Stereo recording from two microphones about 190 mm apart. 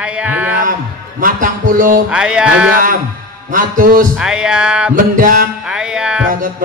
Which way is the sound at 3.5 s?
45° right (ahead or behind).